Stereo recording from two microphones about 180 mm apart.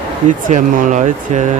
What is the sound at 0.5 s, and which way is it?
Speech, 40° right (ahead or behind).